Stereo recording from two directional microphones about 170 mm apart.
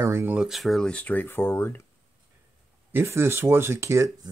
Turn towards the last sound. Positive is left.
turn(degrees=-15)  # may be behind; listen again after turning